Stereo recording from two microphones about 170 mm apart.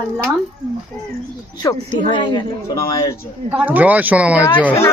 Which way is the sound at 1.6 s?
25° left (ahead or behind).